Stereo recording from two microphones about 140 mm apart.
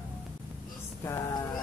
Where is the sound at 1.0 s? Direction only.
20° left (ahead or behind).